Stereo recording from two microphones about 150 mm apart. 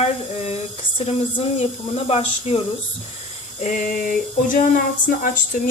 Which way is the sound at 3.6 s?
65° left (ahead or behind).